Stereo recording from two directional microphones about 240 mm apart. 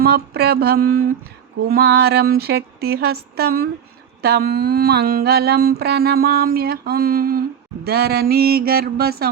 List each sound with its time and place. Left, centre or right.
0.0 s mantra: right